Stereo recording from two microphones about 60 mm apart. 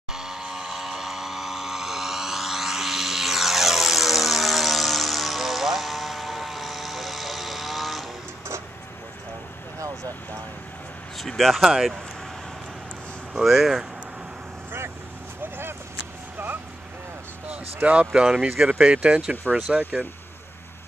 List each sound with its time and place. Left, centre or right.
0.1 s vehicle: centre
9.8 s vehicle: right
11.1 s a sound: centre
11.7 s speech: centre
13.3 s speech: centre
17.8 s speech: centre
19.4 s speech: right